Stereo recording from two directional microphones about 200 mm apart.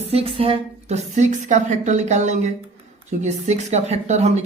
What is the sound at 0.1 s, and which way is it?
Speech, 30° right (ahead or behind).